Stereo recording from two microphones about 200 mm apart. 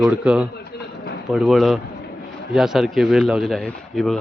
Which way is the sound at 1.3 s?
Centre (ahead or behind).